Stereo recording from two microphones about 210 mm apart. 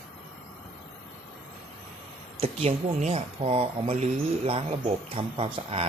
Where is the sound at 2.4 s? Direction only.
30° right (ahead or behind).